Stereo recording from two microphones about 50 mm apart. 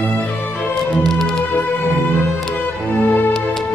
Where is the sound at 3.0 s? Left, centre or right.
Left.